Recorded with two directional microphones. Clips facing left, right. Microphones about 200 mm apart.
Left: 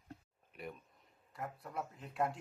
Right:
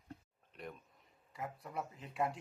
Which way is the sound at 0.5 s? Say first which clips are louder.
Left 1 dB; 5° left (ahead or behind).